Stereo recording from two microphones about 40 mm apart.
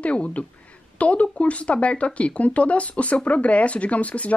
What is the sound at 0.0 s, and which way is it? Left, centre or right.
Speech, left.